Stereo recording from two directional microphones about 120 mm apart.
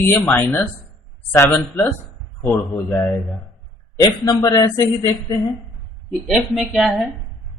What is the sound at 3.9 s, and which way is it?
Speech, 30° left (ahead or behind).